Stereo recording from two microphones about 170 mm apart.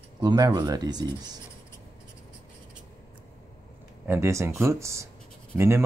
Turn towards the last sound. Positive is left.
turn(degrees=-15)  # may be behind; listen again after turning